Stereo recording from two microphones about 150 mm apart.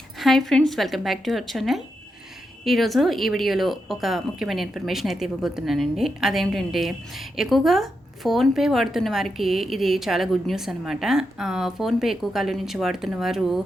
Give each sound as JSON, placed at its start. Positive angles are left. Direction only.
{"t": 0.2, "sound": "speech", "side_deg": 0}